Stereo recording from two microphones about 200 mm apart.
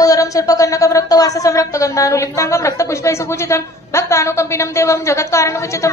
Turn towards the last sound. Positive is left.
turn(degrees=15)  # may be behind; listen again after turning